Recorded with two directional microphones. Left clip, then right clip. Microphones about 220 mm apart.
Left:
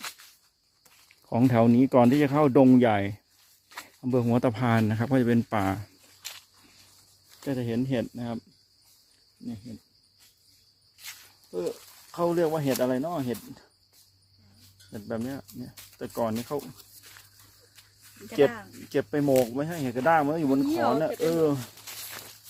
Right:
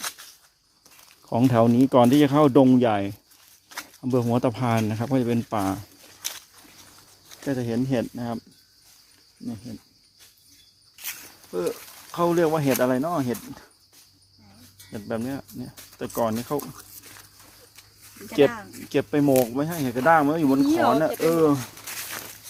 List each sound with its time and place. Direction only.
1.3 s speech: 25° left (ahead or behind)
7.4 s speech: 25° left (ahead or behind)
12.1 s speech: centre (ahead or behind)
14.8 s speech: centre (ahead or behind)
18.3 s speech: centre (ahead or behind)